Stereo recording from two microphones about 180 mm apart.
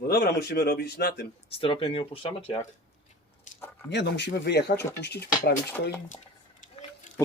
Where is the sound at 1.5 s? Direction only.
30° left (ahead or behind).